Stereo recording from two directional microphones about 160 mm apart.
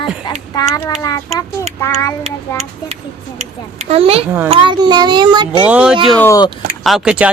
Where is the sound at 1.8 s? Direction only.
15° left (ahead or behind).